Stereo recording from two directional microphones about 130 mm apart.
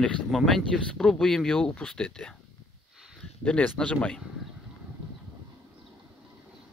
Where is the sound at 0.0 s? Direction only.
5° left (ahead or behind).